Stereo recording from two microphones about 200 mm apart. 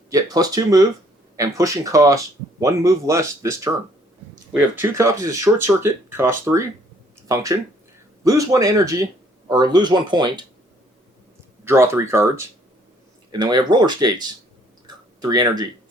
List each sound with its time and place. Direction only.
0.1 s speech: 20° right (ahead or behind)
11.6 s speech: 10° right (ahead or behind)
13.4 s speech: 20° right (ahead or behind)